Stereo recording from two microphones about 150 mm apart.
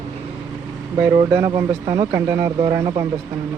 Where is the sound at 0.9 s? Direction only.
25° right (ahead or behind).